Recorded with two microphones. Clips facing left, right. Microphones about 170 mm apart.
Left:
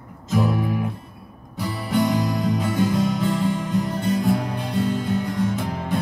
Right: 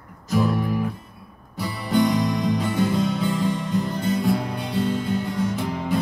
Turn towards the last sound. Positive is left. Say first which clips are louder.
# even
turn(degrees=0)  # may be behind; listen again after turning